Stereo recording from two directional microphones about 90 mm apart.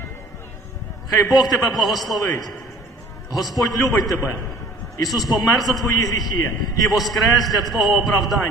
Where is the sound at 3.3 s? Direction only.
45° left (ahead or behind).